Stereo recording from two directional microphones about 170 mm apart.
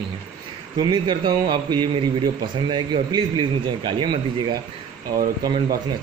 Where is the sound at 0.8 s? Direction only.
25° right (ahead or behind).